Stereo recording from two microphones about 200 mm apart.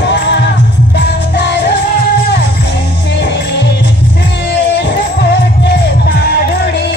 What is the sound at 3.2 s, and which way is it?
Music, 60° left (ahead or behind).